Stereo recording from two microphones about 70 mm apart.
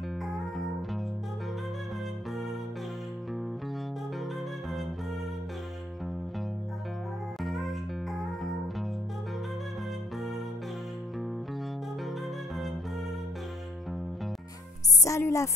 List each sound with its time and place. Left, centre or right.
0.2 s music: centre
7.4 s music: centre
15.0 s music: left